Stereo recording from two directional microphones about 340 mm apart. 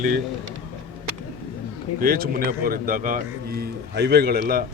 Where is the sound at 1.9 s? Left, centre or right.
Right.